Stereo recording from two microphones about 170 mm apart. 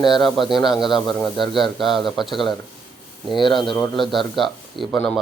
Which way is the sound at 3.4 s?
30° left (ahead or behind).